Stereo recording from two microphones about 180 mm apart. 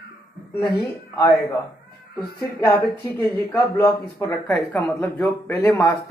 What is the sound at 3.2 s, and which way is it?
Speech, 15° left (ahead or behind).